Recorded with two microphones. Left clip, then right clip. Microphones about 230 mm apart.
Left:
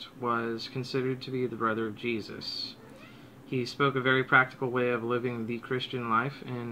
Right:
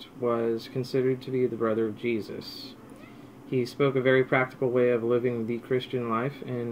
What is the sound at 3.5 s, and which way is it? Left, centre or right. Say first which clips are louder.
A man's voice: right 2 dB; centre.